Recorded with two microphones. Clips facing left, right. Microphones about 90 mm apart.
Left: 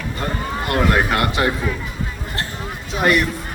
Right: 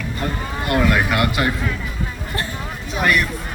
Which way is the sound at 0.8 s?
30° left (ahead or behind).